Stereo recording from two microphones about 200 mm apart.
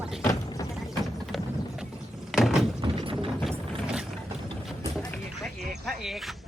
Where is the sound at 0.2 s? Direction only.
15° left (ahead or behind).